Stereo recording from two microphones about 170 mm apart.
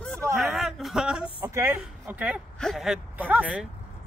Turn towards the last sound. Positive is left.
turn(degrees=-10)  # may be behind; listen again after turning